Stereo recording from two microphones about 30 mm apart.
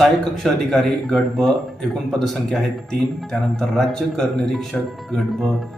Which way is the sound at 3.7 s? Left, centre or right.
Left.